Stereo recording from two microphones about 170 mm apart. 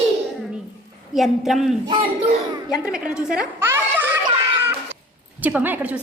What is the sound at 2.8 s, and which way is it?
Speech, 5° right (ahead or behind).